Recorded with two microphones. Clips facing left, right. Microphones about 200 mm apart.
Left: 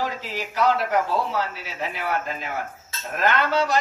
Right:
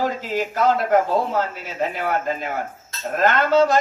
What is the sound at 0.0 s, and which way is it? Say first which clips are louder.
A man's voice: right 6 dB; 50° right (ahead or behind).